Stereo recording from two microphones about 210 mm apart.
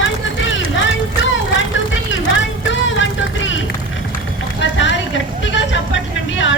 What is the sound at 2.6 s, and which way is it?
Vehicle, 65° left (ahead or behind).